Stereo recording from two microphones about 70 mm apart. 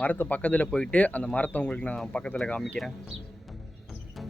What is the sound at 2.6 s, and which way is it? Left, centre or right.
Speech, centre.